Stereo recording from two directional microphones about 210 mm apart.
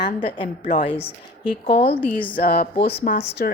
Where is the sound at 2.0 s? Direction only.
10° left (ahead or behind).